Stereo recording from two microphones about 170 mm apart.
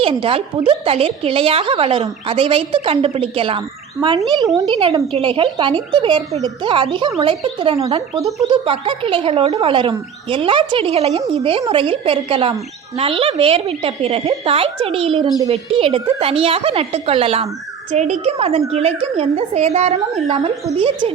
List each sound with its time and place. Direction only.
0.0 s a woman's voice: 30° right (ahead or behind)
4.3 s a woman's voice: 20° right (ahead or behind)
8.2 s speech: centre (ahead or behind)
8.4 s a woman's voice: 30° right (ahead or behind)